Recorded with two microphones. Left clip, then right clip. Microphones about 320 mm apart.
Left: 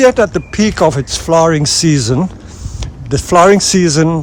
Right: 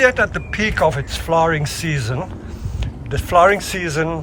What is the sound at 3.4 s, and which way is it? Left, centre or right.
Speech, centre.